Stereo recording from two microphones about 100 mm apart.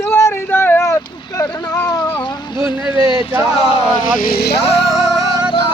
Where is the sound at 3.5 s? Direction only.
70° left (ahead or behind).